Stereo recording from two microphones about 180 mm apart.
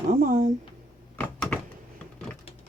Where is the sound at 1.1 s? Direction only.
10° left (ahead or behind).